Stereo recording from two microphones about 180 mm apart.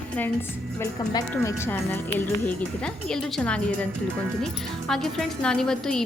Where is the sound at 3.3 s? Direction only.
5° left (ahead or behind).